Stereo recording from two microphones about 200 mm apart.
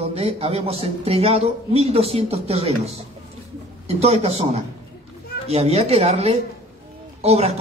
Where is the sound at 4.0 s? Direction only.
30° right (ahead or behind).